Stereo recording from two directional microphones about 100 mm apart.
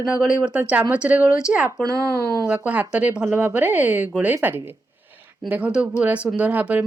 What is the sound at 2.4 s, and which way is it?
A woman's voice, 15° right (ahead or behind).